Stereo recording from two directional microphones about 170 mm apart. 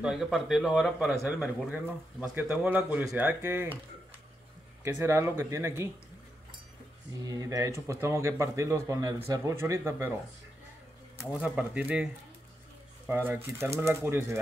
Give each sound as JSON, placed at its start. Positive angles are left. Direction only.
{"t": 0.0, "sound": "a man's voice", "side_deg": 0}
{"t": 4.8, "sound": "a man's voice", "side_deg": -15}
{"t": 7.2, "sound": "a man's voice", "side_deg": -20}
{"t": 11.3, "sound": "a man's voice", "side_deg": -5}